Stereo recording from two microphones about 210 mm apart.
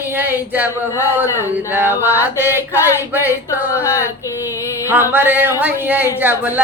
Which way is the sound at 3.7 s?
15° left (ahead or behind).